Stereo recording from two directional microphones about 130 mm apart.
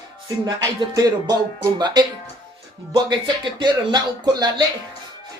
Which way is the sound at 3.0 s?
35° right (ahead or behind).